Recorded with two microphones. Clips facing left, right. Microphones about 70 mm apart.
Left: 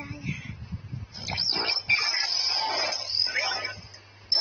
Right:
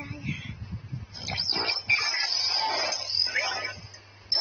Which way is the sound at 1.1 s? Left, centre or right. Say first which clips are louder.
Left 1 dB; right.